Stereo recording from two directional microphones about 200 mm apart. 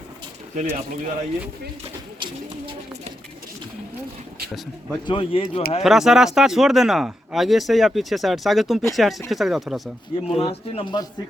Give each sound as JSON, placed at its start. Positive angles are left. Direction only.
{"t": 0.5, "sound": "speech", "side_deg": -35}
{"t": 5.0, "sound": "speech", "side_deg": 25}
{"t": 5.8, "sound": "speech", "side_deg": 0}
{"t": 10.3, "sound": "speech", "side_deg": 30}